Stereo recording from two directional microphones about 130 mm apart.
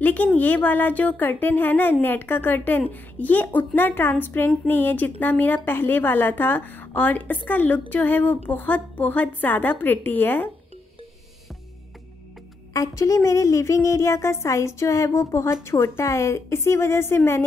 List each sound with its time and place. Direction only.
0.0 s speech: 10° left (ahead or behind)
12.7 s speech: 25° left (ahead or behind)